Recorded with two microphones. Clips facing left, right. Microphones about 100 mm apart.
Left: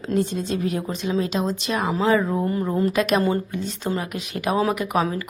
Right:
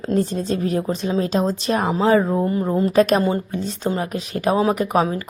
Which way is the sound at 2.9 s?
35° right (ahead or behind).